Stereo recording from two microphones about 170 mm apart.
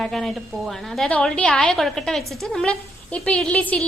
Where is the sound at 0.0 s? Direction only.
Centre (ahead or behind).